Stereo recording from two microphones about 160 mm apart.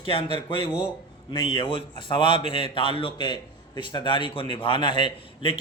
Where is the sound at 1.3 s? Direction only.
30° left (ahead or behind).